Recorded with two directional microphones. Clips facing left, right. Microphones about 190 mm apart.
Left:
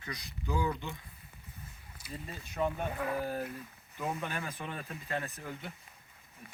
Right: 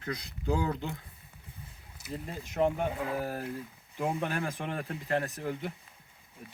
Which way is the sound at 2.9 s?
10° right (ahead or behind).